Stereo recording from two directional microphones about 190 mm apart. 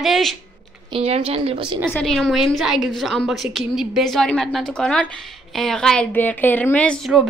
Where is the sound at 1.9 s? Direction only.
5° left (ahead or behind).